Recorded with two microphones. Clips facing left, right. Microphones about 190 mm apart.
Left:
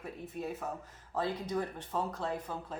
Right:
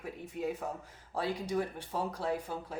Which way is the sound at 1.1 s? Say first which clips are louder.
Right 1 dB; 10° right (ahead or behind).